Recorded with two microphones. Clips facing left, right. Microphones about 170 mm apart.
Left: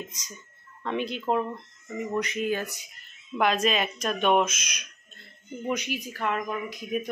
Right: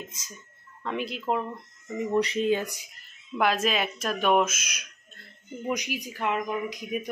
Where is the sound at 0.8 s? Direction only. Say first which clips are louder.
Left 1 dB; centre (ahead or behind).